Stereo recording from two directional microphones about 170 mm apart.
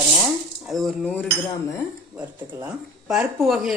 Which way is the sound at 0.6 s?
Centre (ahead or behind).